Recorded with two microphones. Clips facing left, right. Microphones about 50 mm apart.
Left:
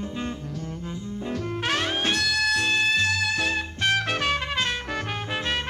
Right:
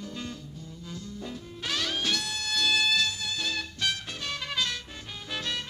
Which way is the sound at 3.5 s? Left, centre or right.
Left.